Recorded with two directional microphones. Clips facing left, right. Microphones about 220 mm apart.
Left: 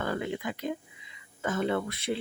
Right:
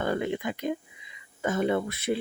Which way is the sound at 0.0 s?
20° right (ahead or behind).